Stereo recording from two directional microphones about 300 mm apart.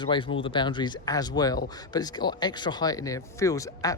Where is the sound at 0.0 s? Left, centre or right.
Centre.